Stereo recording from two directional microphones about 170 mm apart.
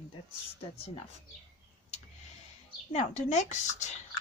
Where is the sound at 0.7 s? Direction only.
35° left (ahead or behind).